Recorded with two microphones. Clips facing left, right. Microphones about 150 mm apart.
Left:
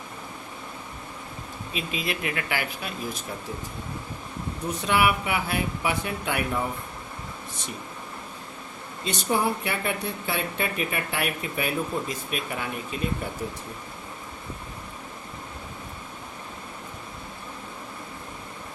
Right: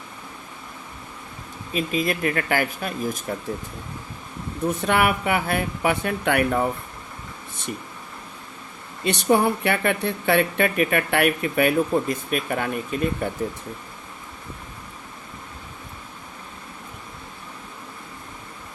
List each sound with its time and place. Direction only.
1.7 s speech: 45° right (ahead or behind)
4.7 s speech: 55° right (ahead or behind)
9.0 s speech: 65° right (ahead or behind)